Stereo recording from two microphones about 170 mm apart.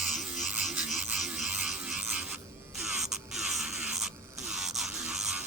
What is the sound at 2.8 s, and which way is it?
Insect, centre (ahead or behind).